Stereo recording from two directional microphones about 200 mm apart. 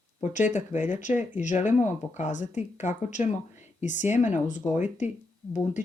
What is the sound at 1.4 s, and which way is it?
Speech, 40° left (ahead or behind).